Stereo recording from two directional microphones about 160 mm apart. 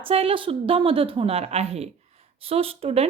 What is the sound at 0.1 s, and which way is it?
A woman's voice, 35° right (ahead or behind).